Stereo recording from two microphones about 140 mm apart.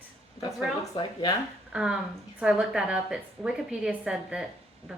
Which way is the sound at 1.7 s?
5° right (ahead or behind).